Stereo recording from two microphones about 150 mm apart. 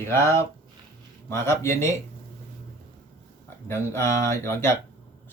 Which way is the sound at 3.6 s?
15° left (ahead or behind).